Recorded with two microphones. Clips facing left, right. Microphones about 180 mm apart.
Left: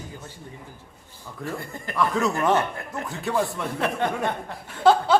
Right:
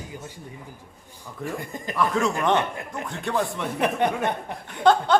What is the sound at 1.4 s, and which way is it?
Speech, 15° right (ahead or behind).